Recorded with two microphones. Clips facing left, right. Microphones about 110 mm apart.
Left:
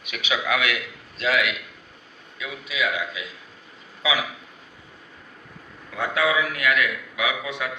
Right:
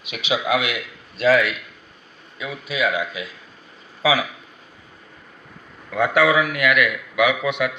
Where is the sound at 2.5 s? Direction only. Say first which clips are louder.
Right 4 dB; 35° right (ahead or behind).